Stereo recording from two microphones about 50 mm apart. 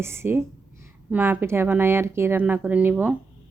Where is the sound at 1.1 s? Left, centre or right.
Right.